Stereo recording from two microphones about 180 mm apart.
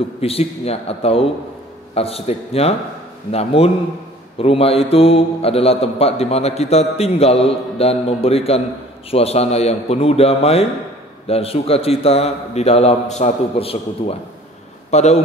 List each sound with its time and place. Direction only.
0.2 s a man's voice: 35° left (ahead or behind)